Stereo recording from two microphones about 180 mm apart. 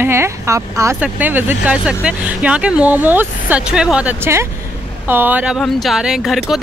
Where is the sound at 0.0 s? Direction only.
15° right (ahead or behind).